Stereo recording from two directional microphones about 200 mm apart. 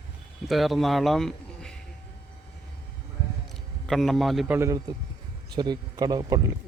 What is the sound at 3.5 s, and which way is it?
A man's voice, centre (ahead or behind).